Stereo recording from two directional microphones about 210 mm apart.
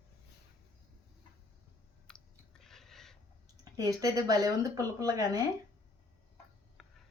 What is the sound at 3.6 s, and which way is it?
Speech, 15° right (ahead or behind).